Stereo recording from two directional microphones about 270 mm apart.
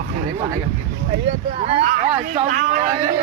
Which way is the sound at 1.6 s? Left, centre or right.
Right.